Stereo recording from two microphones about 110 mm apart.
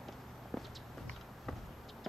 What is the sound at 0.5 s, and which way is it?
Walk, centre (ahead or behind).